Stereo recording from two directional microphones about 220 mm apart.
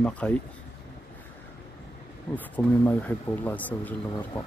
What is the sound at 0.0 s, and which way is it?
Speech, 5° left (ahead or behind).